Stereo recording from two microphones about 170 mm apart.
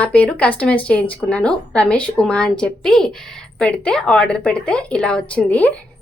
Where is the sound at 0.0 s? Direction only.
10° left (ahead or behind).